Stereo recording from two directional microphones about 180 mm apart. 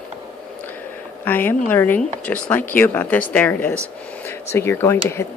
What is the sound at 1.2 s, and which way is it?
A woman's voice, 10° left (ahead or behind).